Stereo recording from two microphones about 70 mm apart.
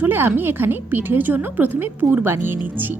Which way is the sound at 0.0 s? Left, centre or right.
Right.